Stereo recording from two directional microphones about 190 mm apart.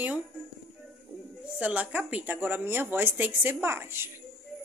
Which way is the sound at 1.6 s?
10° right (ahead or behind).